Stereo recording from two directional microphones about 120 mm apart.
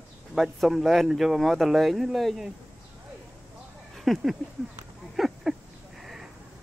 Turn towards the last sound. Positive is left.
turn(degrees=-5)  # may be behind; listen again after turning